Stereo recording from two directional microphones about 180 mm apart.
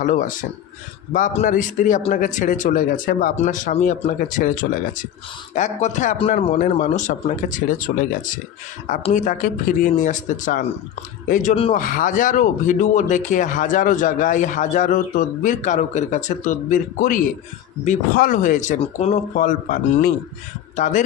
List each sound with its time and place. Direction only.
0.0 s speech: 45° left (ahead or behind)
7.9 s speech: 55° left (ahead or behind)
9.1 s speech: 45° left (ahead or behind)
11.5 s speech: 30° left (ahead or behind)
11.8 s speech: 45° left (ahead or behind)